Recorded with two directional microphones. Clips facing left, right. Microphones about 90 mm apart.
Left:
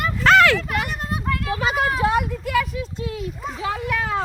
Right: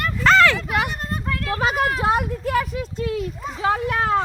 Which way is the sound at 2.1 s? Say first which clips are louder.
Even; 40° right (ahead or behind).